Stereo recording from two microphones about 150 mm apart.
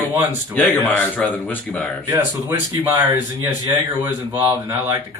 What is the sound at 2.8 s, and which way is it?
Speech, 15° right (ahead or behind).